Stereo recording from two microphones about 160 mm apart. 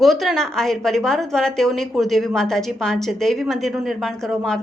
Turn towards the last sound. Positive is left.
turn(degrees=5)  # may be behind; listen again after turning